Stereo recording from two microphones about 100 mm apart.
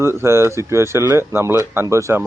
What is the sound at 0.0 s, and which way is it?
Speech, 25° right (ahead or behind).